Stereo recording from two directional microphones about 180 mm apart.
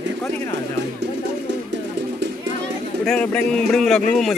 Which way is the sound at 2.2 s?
70° right (ahead or behind).